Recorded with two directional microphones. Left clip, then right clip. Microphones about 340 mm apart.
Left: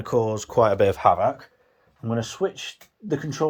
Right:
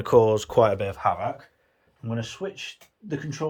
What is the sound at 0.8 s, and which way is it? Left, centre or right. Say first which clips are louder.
Speech: left 7 dB; left.